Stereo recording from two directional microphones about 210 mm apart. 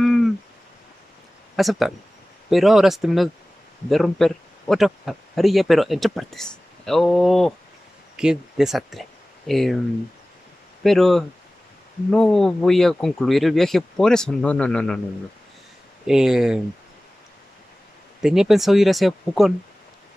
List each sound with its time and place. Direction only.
0.0 s a sound: centre (ahead or behind)
1.6 s speech: centre (ahead or behind)
10.8 s speech: centre (ahead or behind)
16.1 s speech: centre (ahead or behind)
18.2 s speech: centre (ahead or behind)